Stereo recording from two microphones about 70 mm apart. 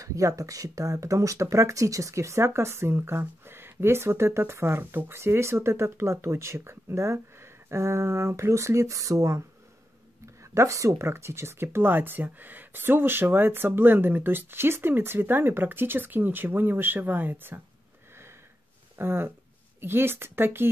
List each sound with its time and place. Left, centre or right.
0.0 s speech: right
18.9 s speech: right